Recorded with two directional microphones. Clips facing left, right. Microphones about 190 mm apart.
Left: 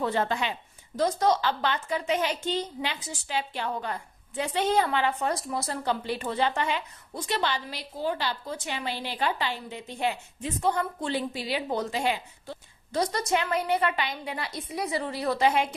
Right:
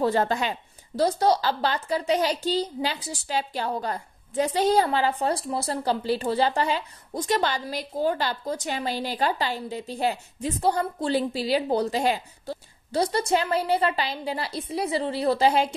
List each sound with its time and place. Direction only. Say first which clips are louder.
0.0 s a woman's voice: right 4 dB; 40° right (ahead or behind)